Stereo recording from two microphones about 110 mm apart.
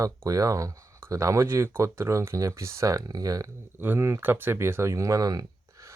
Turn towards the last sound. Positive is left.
turn(degrees=-30)  # may be behind; listen again after turning